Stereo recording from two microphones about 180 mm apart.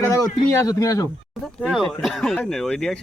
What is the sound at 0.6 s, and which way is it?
Speech, 20° left (ahead or behind).